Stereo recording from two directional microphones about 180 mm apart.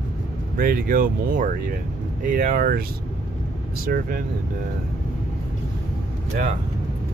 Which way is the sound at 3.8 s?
55° right (ahead or behind).